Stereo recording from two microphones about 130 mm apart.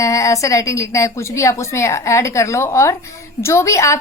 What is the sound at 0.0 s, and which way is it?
A woman's voice, 25° left (ahead or behind).